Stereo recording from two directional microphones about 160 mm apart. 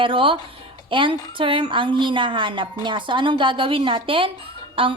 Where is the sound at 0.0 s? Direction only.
35° right (ahead or behind).